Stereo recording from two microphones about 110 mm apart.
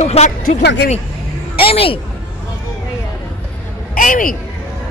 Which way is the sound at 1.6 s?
55° left (ahead or behind).